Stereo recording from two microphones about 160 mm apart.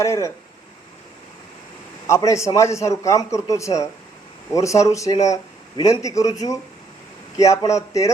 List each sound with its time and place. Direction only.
0.0 s a man's voice: 20° left (ahead or behind)
2.0 s a man's voice: 20° left (ahead or behind)